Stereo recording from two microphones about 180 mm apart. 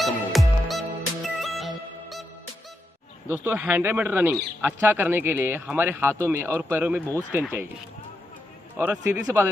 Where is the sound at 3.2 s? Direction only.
10° right (ahead or behind).